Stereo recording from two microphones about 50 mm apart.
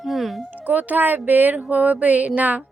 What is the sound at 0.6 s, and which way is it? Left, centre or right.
Speech, right.